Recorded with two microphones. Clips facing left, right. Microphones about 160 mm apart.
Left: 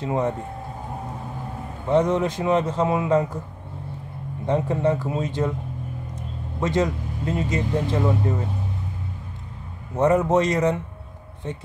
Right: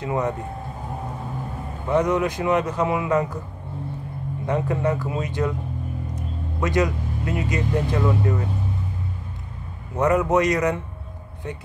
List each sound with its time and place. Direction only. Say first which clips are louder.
0.0 s speech: left 1 dB; 25° left (ahead or behind)
1.9 s speech: left 1 dB; 25° left (ahead or behind)
4.5 s speech: left 2 dB; 25° left (ahead or behind)
6.6 s a man's voice: even; 25° left (ahead or behind)
9.9 s speech: left 1 dB; 25° left (ahead or behind)